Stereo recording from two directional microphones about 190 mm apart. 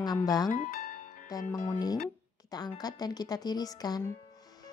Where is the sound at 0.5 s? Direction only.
45° left (ahead or behind).